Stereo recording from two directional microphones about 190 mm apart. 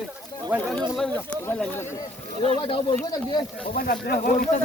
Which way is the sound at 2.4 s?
30° left (ahead or behind).